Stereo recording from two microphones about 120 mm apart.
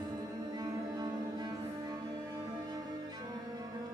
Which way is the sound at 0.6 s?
35° right (ahead or behind).